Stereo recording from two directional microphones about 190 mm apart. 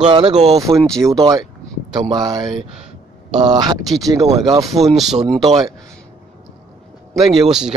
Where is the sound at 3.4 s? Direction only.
20° right (ahead or behind).